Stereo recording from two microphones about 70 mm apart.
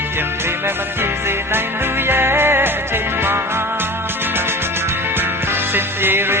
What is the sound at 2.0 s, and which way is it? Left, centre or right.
Music, right.